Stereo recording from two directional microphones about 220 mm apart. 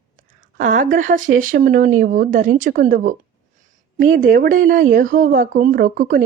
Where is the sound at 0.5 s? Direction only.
40° right (ahead or behind).